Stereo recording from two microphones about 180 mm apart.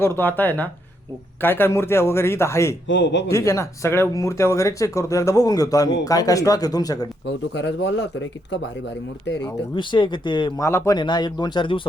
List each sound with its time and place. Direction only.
0.0 s speech: 10° left (ahead or behind)
2.8 s speech: 90° left
3.2 s speech: 15° left (ahead or behind)
7.5 s speech: 85° left
9.7 s speech: 25° left (ahead or behind)
10.7 s speech: 15° left (ahead or behind)